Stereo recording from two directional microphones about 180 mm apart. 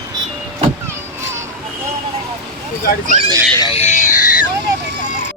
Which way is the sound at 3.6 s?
30° left (ahead or behind).